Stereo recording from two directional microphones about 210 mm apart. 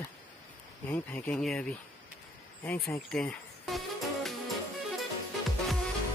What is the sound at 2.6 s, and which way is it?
Speech, 10° left (ahead or behind).